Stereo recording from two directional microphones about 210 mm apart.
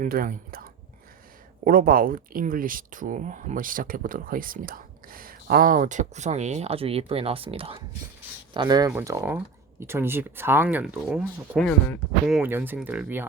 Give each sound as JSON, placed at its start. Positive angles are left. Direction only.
{"t": 0.0, "sound": "speech", "side_deg": -40}